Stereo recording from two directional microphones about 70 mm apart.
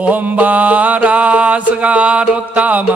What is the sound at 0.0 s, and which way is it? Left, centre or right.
Music, right.